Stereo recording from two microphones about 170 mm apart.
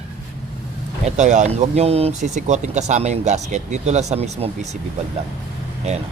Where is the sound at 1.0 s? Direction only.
45° right (ahead or behind).